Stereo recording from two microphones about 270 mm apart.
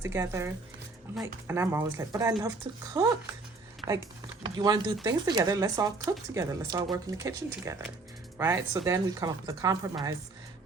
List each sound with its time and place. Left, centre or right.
0.0 s speech: centre
4.5 s speech: centre